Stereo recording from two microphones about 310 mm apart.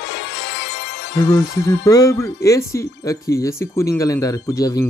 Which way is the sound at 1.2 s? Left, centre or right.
Centre.